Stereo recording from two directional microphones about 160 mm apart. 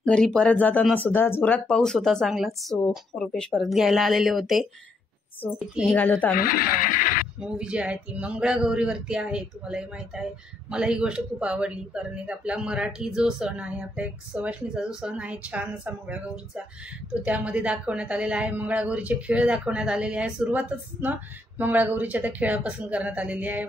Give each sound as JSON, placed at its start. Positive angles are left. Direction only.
{"t": 0.0, "sound": "speech", "side_deg": 5}
{"t": 5.9, "sound": "speech", "side_deg": 10}
{"t": 6.3, "sound": "speech", "side_deg": 65}
{"t": 7.3, "sound": "speech", "side_deg": -5}